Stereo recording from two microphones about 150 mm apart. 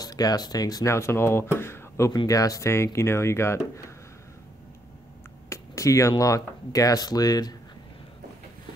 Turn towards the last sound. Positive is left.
turn(degrees=25)  # may be behind; listen again after turning